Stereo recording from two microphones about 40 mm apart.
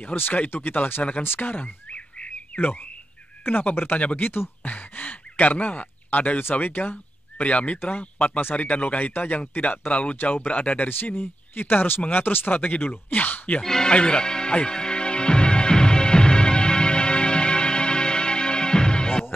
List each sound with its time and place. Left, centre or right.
0.0 s speech: left
1.0 s speech: left
1.4 s bird: left
2.5 s speech: left
3.4 s speech: left
3.9 s speech: left
4.2 s speech: left
4.6 s a sound: left
6.0 s speech: left
7.4 s speech: left
10.9 s speech: left
13.6 s speech: centre
13.9 s music: left